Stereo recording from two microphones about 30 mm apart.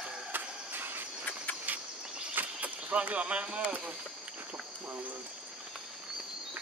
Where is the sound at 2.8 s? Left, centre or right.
Right.